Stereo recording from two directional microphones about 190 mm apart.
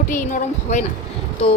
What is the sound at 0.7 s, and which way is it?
Speech, 40° left (ahead or behind).